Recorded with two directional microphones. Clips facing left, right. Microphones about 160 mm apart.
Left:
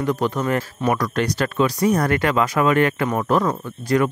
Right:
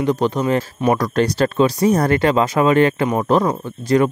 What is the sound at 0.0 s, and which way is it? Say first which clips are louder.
Speech: right 3 dB; 20° right (ahead or behind).